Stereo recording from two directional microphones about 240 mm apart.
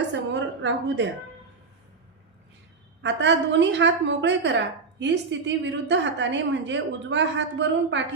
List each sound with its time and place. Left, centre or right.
0.3 s a woman's voice: right
3.0 s a woman's voice: right